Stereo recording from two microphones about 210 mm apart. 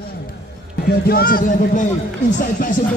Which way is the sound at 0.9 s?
45° left (ahead or behind).